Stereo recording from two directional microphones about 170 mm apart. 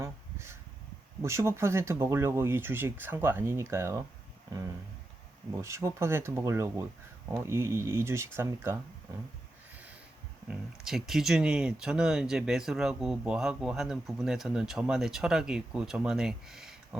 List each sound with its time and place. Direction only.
0.0 s a sound: 15° right (ahead or behind)
1.2 s speech: 15° right (ahead or behind)
5.6 s speech: 15° right (ahead or behind)
10.5 s speech: centre (ahead or behind)